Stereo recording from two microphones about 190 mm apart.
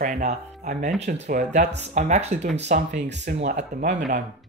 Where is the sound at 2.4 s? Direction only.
65° right (ahead or behind).